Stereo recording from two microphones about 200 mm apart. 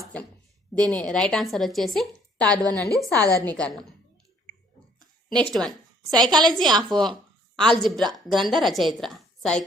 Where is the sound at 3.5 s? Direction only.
5° left (ahead or behind).